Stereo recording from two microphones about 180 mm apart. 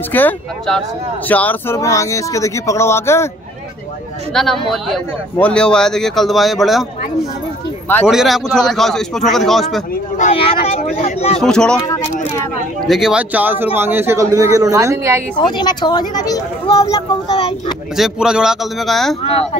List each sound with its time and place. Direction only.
0.1 s speech: 10° left (ahead or behind)
4.3 s a man's voice: centre (ahead or behind)
8.1 s a man's voice: centre (ahead or behind)
10.1 s speech: 35° left (ahead or behind)
11.3 s a man's voice: 5° left (ahead or behind)
12.8 s a woman's voice: centre (ahead or behind)
15.3 s speech: 25° left (ahead or behind)
17.9 s a man's voice: centre (ahead or behind)